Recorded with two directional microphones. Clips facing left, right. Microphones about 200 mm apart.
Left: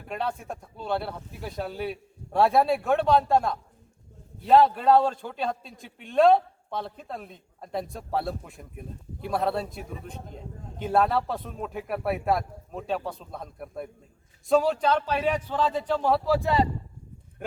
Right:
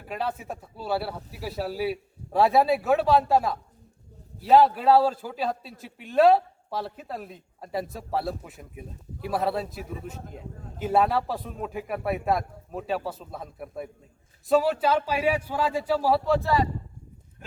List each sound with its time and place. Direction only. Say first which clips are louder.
0.0 s a man's voice: even; centre (ahead or behind)
16.4 s speech: left 1 dB; 20° left (ahead or behind)